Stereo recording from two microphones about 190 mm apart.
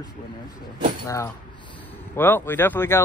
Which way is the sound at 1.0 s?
15° left (ahead or behind).